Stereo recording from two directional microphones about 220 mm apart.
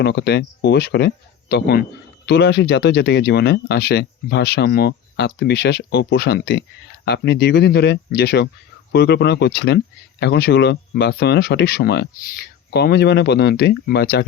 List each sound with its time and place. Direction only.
0.0 s speech: 50° left (ahead or behind)